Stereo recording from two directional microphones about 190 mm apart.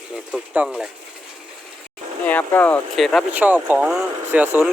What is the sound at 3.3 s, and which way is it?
Speech, 10° right (ahead or behind).